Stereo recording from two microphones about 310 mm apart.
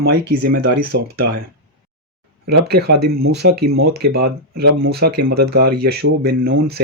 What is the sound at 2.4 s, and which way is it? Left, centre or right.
Speech, right.